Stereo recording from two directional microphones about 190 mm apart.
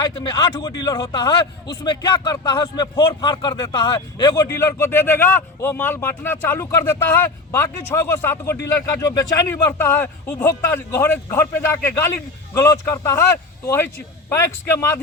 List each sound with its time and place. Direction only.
0.2 s a man's voice: 20° left (ahead or behind)